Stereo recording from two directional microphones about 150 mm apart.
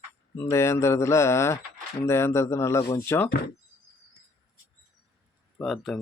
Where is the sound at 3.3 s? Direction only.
90° left.